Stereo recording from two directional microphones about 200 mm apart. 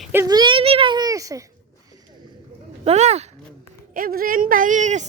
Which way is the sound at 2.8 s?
35° right (ahead or behind).